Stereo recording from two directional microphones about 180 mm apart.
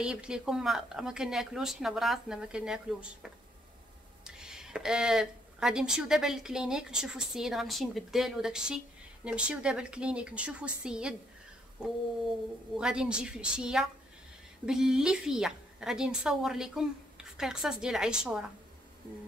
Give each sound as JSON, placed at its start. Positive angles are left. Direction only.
{"t": 0.0, "sound": "speech", "side_deg": -5}
{"t": 12.7, "sound": "speech", "side_deg": -5}